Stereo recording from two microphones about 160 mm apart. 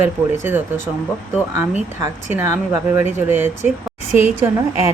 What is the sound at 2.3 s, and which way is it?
Speech, 15° right (ahead or behind).